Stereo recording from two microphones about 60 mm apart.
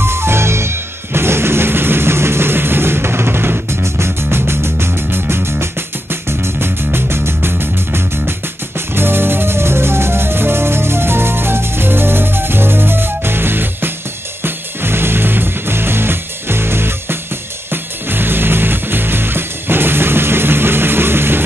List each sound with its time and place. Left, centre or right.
0.0 s music: right